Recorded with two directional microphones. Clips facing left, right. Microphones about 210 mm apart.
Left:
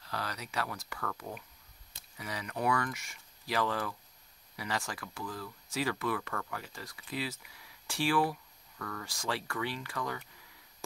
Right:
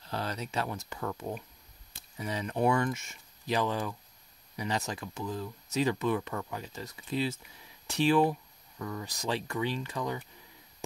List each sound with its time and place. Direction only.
0.0 s speech: 25° right (ahead or behind)